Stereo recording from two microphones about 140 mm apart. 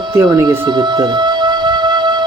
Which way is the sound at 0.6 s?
30° right (ahead or behind).